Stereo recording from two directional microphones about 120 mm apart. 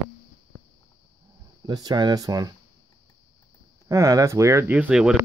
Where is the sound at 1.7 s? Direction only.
35° right (ahead or behind).